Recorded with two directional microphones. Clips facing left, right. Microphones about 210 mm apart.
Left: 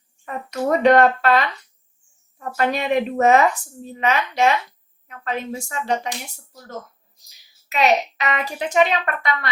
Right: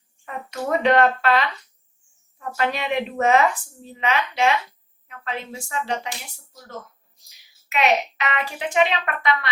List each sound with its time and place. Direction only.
0.8 s speech: 45° left (ahead or behind)
2.4 s speech: 45° left (ahead or behind)
7.7 s a child's voice: 40° left (ahead or behind)